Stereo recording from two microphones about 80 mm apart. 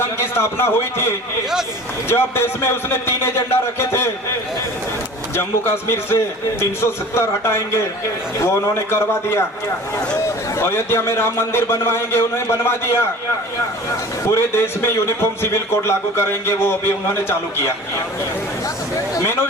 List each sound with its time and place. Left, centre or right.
0.0 s a man's voice: left
5.4 s a man's voice: left
10.6 s a man's voice: left
14.3 s a man's voice: left
19.2 s a man's voice: left